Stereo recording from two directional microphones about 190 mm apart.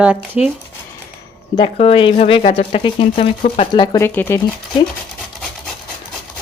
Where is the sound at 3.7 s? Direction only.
20° left (ahead or behind).